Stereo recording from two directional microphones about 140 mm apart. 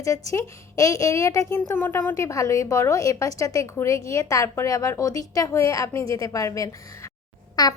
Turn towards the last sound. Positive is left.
turn(degrees=30)  # may be behind; listen again after turning